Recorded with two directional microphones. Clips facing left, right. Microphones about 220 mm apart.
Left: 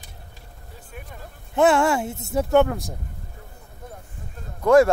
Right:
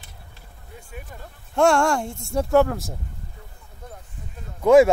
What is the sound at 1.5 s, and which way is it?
Speech, 5° left (ahead or behind).